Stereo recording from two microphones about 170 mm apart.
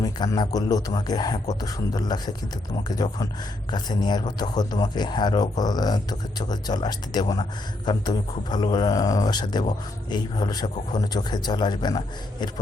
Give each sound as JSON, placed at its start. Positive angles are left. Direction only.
{"t": 0.0, "sound": "a man's voice", "side_deg": 20}